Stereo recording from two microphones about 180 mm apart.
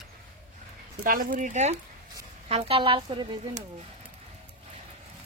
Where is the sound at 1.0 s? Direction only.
50° right (ahead or behind); by 3.6 s 25° right (ahead or behind).